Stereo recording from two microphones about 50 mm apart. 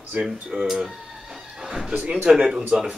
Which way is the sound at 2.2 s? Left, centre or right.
Centre.